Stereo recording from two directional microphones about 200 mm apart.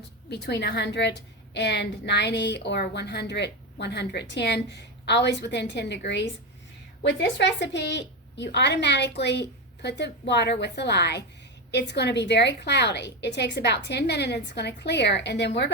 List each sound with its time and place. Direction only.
0.3 s a woman's voice: 55° left (ahead or behind)